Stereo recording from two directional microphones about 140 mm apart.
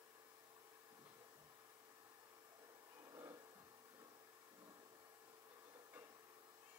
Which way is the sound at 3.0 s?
20° right (ahead or behind).